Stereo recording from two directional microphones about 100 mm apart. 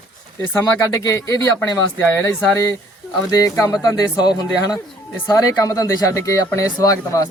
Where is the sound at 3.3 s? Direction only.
35° left (ahead or behind).